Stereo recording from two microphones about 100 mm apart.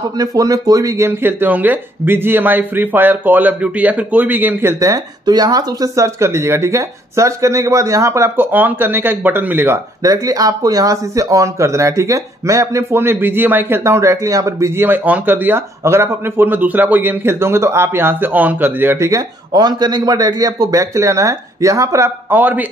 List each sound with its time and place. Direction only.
0.2 s speech: 35° right (ahead or behind); by 9.8 s 20° right (ahead or behind)
10.0 s speech: 35° right (ahead or behind)
19.5 s a man's voice: 45° right (ahead or behind); by 22.7 s 15° right (ahead or behind)